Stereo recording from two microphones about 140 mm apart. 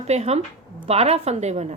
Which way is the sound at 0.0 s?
50° right (ahead or behind).